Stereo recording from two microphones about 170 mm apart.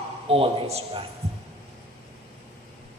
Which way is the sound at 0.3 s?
35° right (ahead or behind).